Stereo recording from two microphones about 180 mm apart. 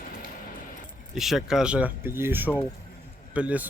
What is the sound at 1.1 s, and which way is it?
Speech, centre (ahead or behind).